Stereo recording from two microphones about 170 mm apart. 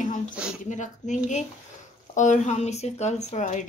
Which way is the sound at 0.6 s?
45° left (ahead or behind).